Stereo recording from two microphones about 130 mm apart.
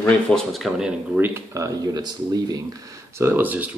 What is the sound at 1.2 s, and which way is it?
Speech, 20° right (ahead or behind).